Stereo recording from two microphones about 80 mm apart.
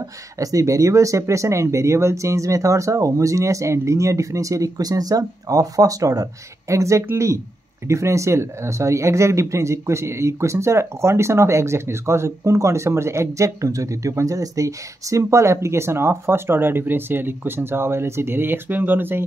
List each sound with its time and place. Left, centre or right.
0.4 s speech: right